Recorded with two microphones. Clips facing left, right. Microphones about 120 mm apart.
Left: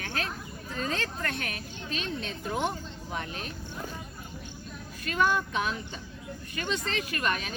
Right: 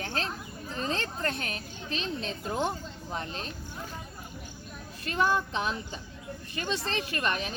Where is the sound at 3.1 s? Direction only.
35° right (ahead or behind).